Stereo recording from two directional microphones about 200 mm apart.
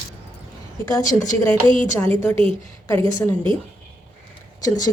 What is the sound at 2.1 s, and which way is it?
A woman's voice, 25° right (ahead or behind).